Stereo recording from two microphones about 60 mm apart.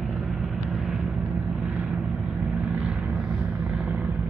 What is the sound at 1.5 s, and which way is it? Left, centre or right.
Vehicle, right.